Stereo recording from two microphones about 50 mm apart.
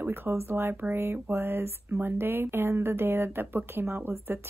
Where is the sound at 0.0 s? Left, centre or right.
Right.